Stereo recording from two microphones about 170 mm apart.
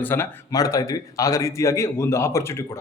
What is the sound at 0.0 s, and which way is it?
Speech, 10° left (ahead or behind).